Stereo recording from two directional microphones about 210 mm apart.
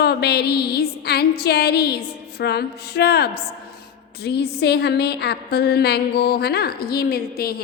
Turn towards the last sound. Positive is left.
turn(degrees=50)  # may be behind; listen again after turning